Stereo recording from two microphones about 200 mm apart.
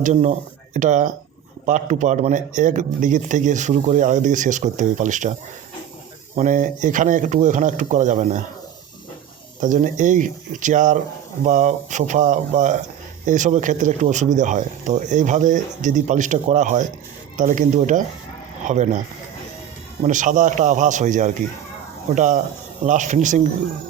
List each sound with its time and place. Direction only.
0.0 s a man's voice: 35° right (ahead or behind)
6.3 s a man's voice: 40° right (ahead or behind)
9.6 s a man's voice: 40° right (ahead or behind)
20.0 s a man's voice: 40° right (ahead or behind)